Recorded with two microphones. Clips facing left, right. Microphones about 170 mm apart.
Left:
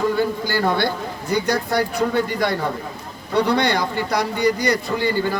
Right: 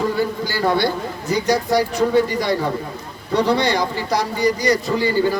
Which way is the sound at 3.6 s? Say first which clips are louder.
Right 1 dB; 55° left (ahead or behind).